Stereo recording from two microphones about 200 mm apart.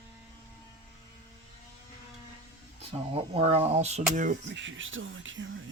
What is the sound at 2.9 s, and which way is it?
Speech, 30° right (ahead or behind).